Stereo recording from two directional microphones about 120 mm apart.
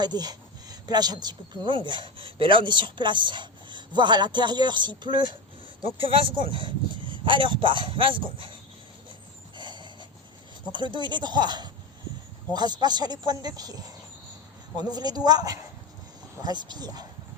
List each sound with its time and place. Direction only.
0.0 s speech: 35° right (ahead or behind)
9.6 s a sound: 40° right (ahead or behind)
10.7 s speech: 40° right (ahead or behind)